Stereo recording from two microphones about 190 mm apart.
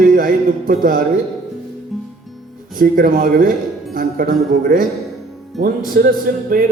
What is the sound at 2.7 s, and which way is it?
A man's voice, 50° right (ahead or behind).